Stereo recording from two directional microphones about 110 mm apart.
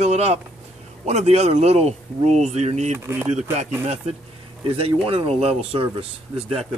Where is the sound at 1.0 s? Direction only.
90° right.